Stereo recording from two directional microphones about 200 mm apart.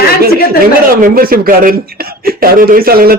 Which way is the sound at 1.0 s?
45° right (ahead or behind).